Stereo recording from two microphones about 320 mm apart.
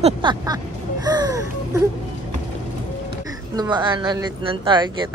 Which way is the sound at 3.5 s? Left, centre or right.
Centre.